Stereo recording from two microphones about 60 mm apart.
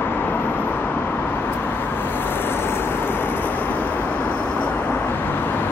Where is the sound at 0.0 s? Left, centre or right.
Left.